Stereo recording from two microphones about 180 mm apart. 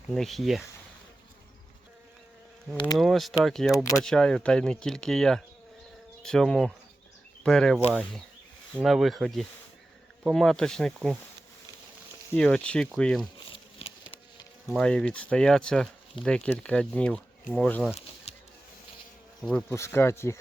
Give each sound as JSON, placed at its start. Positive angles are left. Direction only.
{"t": 0.1, "sound": "speech", "side_deg": 0}
{"t": 3.0, "sound": "speech", "side_deg": 0}
{"t": 12.3, "sound": "speech", "side_deg": 5}
{"t": 13.5, "sound": "a sound", "side_deg": 30}
{"t": 14.8, "sound": "speech", "side_deg": 5}
{"t": 19.4, "sound": "speech", "side_deg": 5}